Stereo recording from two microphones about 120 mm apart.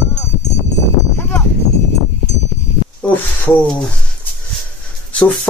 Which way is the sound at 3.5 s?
15° left (ahead or behind).